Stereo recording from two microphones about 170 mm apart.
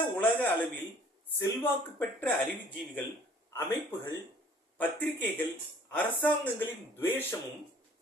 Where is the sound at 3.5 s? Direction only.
15° left (ahead or behind).